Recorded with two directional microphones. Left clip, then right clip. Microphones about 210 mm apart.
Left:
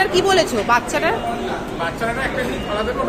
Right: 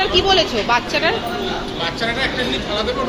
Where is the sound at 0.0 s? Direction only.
25° left (ahead or behind).